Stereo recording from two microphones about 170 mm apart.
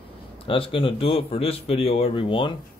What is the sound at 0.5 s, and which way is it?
A man's voice, 30° left (ahead or behind).